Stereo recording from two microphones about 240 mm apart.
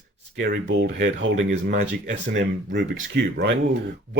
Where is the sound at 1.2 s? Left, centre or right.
Right.